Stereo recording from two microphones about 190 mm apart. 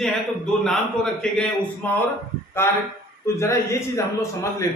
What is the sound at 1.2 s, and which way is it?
A man's voice, 5° left (ahead or behind).